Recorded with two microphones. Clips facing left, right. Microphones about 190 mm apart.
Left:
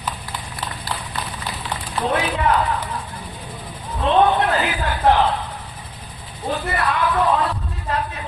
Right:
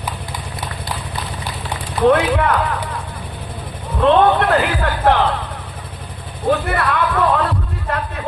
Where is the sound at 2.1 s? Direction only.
60° right (ahead or behind).